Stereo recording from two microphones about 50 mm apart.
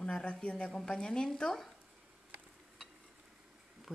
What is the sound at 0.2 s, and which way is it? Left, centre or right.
Speech, left.